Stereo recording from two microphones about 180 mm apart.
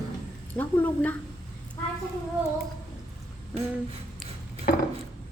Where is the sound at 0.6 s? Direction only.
10° left (ahead or behind).